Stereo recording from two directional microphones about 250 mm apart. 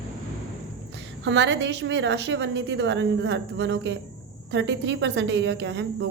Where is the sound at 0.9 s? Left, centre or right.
Right.